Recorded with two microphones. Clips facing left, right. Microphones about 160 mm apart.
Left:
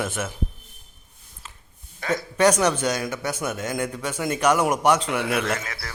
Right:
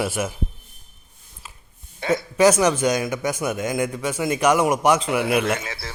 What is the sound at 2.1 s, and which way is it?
A man's voice, 10° right (ahead or behind).